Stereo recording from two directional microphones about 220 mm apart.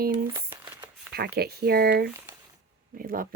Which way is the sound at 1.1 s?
45° right (ahead or behind).